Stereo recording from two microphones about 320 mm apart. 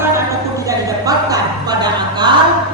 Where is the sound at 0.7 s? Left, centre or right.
Centre.